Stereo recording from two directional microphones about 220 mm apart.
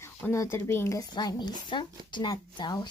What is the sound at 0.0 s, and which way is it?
Speech, 10° left (ahead or behind).